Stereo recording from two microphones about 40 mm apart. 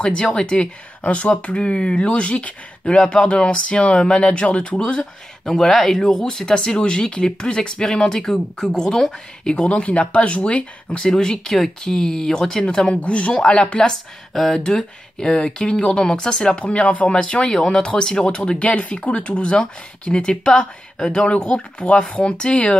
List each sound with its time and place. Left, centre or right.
0.0 s speech: left
5.4 s speech: centre; by 11.0 s left
11.0 s speech: centre
12.7 s speech: left
14.3 s speech: centre
14.6 s speech: centre
16.5 s speech: left
17.1 s speech: left